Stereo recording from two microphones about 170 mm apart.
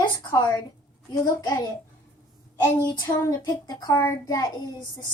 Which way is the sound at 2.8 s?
20° left (ahead or behind).